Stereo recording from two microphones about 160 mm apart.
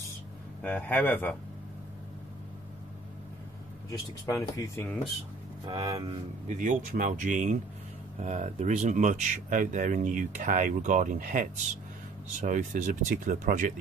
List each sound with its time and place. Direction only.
0.6 s speech: 10° left (ahead or behind)
4.3 s speech: 20° left (ahead or behind)
5.7 s speech: 30° right (ahead or behind)
6.4 s speech: 50° right (ahead or behind)